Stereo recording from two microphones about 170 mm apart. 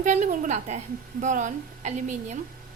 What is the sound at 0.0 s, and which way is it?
A woman's voice, 45° right (ahead or behind).